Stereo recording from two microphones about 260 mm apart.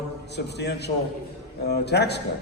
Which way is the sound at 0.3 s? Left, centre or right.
Left.